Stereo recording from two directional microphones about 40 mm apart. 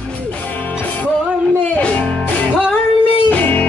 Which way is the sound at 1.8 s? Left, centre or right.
Left.